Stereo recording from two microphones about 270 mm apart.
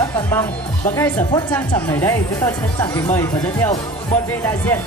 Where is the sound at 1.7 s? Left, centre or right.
Centre.